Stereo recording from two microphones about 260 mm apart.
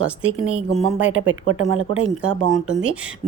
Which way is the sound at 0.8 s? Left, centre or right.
Right.